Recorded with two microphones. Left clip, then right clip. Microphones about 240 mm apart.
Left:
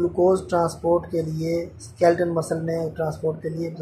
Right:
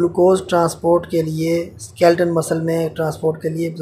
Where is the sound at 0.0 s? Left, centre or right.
Centre.